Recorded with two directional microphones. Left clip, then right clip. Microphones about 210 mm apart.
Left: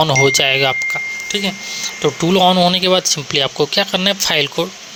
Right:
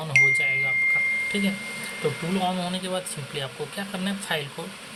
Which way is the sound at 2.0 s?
50° left (ahead or behind).